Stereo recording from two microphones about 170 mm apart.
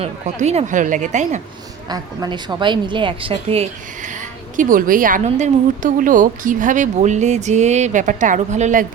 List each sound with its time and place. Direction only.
0.0 s a woman's voice: 40° right (ahead or behind)
1.9 s a woman's voice: 25° right (ahead or behind)
3.5 s a woman's voice: 40° right (ahead or behind)